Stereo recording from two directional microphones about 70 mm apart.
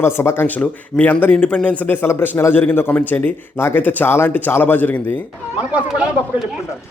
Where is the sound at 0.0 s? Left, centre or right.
Left.